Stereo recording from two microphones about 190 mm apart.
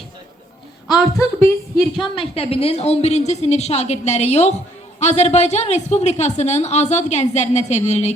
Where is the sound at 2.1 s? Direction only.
30° left (ahead or behind).